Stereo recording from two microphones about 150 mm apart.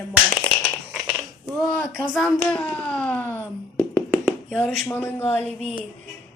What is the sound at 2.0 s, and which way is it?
A woman's voice, centre (ahead or behind).